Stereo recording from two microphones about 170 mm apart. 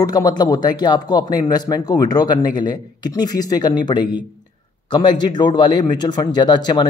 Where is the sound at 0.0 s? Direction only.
20° left (ahead or behind).